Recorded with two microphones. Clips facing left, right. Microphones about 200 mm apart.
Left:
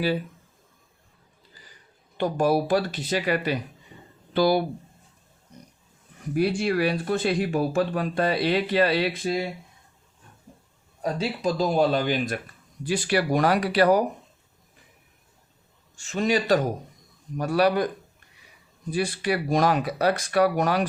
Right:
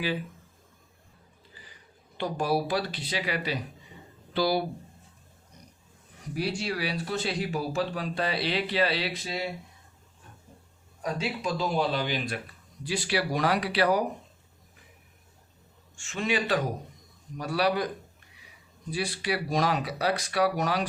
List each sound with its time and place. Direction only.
2.1 s speech: 50° left (ahead or behind)
6.3 s speech: 55° left (ahead or behind)
11.0 s speech: 35° left (ahead or behind)
16.0 s a man's voice: 40° left (ahead or behind)
18.9 s speech: 50° left (ahead or behind)